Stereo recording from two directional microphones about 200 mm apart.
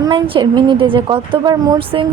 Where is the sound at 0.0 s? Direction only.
25° right (ahead or behind).